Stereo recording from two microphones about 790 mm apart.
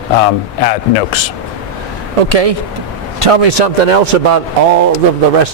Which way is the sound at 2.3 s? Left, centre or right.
Right.